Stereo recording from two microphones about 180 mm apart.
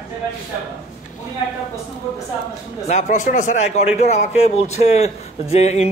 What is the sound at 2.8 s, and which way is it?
A man's voice, 40° left (ahead or behind).